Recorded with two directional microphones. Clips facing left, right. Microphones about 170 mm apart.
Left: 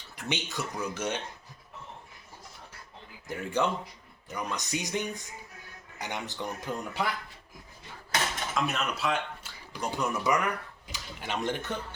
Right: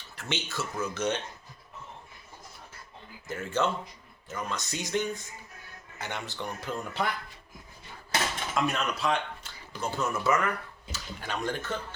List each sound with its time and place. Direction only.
0.2 s speech: 15° left (ahead or behind)
3.2 s speech: 15° left (ahead or behind)
8.5 s speech: centre (ahead or behind)
9.8 s speech: 15° left (ahead or behind)